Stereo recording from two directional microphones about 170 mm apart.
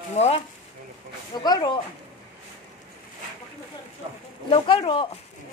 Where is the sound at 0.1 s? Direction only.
40° left (ahead or behind).